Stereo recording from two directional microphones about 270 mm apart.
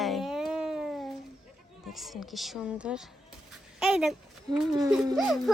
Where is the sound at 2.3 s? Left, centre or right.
Centre.